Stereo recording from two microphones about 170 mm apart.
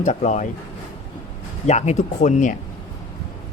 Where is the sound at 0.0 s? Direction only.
45° left (ahead or behind).